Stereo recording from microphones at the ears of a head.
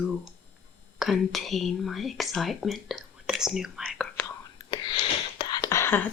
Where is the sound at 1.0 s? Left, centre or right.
Left.